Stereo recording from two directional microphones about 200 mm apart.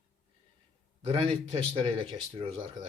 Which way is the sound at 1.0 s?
25° right (ahead or behind).